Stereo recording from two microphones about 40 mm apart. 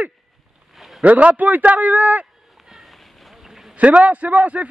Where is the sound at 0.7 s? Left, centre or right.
Centre.